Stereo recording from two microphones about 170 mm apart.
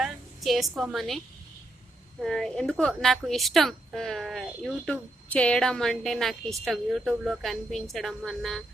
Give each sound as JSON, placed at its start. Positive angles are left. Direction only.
{"t": 0.0, "sound": "a woman's voice", "side_deg": 0}
{"t": 2.2, "sound": "a woman's voice", "side_deg": 5}